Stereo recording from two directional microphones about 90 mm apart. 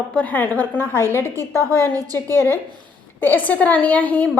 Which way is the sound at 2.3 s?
25° left (ahead or behind).